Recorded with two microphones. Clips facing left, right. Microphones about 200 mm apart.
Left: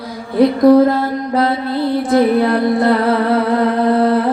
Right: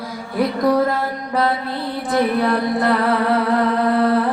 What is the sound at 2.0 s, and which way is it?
Music, 25° left (ahead or behind).